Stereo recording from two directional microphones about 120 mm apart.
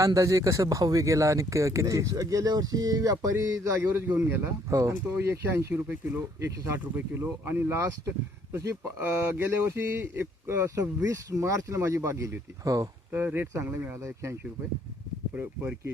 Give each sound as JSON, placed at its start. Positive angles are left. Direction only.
{"t": 0.0, "sound": "speech", "side_deg": -25}
{"t": 13.1, "sound": "speech", "side_deg": -15}
{"t": 15.4, "sound": "speech", "side_deg": -15}